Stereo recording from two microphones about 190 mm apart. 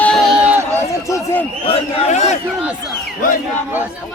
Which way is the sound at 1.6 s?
35° left (ahead or behind).